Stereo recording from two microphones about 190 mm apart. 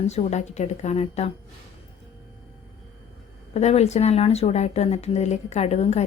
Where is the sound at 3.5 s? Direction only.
35° left (ahead or behind).